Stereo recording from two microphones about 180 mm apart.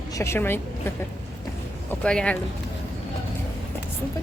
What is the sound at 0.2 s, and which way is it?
Speech, 15° left (ahead or behind).